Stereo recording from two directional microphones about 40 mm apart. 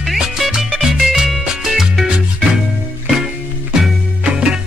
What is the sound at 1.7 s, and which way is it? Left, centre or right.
Salsa music, centre.